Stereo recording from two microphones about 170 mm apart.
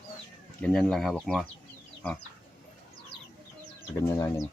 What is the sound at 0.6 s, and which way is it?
Speech, 5° left (ahead or behind).